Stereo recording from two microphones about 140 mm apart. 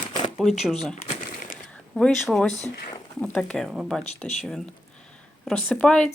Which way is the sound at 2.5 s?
55° left (ahead or behind).